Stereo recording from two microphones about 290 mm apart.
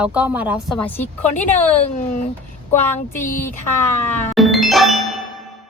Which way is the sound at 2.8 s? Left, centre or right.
Left.